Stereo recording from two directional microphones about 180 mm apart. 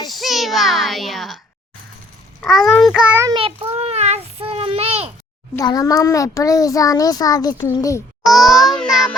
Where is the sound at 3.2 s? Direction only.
25° right (ahead or behind).